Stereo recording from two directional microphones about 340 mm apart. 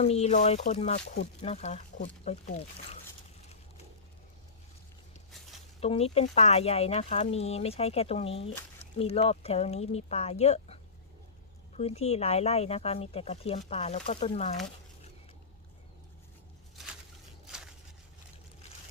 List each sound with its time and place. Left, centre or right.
0.0 s speech: centre
5.8 s speech: centre
11.8 s speech: centre
17.4 s a sound: centre